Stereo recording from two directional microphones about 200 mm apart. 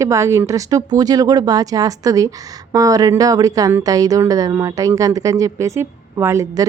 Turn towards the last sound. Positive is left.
turn(degrees=-15)  # may be behind; listen again after turning